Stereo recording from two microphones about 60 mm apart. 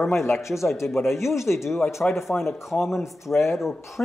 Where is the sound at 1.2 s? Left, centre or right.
Left.